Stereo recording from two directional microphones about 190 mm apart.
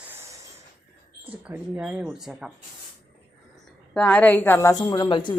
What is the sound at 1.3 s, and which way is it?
Speech, 10° right (ahead or behind).